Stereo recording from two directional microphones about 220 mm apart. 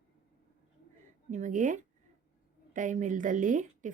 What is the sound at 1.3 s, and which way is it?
A woman's voice, 35° right (ahead or behind).